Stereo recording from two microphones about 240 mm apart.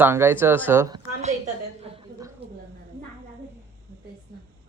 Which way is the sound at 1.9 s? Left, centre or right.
Right.